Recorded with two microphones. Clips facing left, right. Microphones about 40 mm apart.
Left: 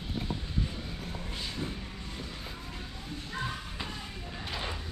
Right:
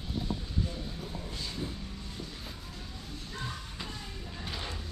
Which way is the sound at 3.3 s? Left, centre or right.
Centre.